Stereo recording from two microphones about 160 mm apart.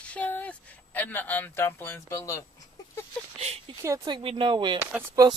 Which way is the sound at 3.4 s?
40° right (ahead or behind).